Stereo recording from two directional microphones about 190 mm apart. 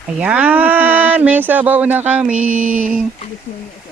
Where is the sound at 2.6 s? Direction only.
40° right (ahead or behind).